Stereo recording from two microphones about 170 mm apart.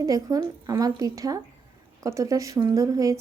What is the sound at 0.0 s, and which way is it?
A woman's voice, 20° right (ahead or behind).